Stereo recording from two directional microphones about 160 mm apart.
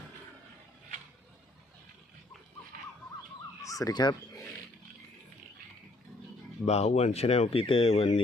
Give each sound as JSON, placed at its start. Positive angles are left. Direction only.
{"t": 3.6, "sound": "speech", "side_deg": 20}
{"t": 6.7, "sound": "speech", "side_deg": 45}